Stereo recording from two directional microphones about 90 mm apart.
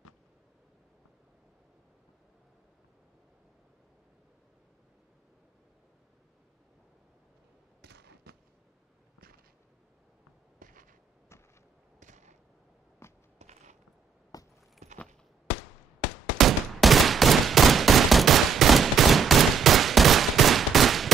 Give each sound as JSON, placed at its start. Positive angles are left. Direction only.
{"t": 13.0, "sound": "biting", "side_deg": 30}
{"t": 14.3, "sound": "keys jangling", "side_deg": 45}
{"t": 16.3, "sound": "gunshot", "side_deg": 0}